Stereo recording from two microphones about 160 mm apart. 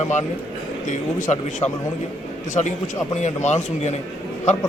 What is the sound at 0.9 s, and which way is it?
A man's voice, 50° left (ahead or behind).